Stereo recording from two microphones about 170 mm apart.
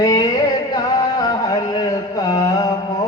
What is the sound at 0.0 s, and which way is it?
Music, 20° left (ahead or behind).